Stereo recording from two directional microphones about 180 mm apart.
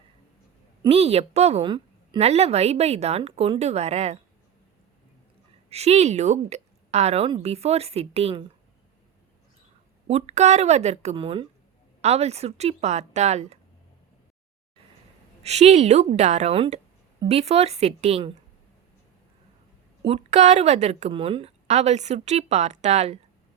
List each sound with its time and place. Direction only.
0.9 s a woman's voice: 35° right (ahead or behind)
5.6 s a woman's voice: 35° right (ahead or behind)
10.1 s a woman's voice: 35° right (ahead or behind)
15.4 s a woman's voice: 35° right (ahead or behind)
20.1 s a woman's voice: 40° right (ahead or behind)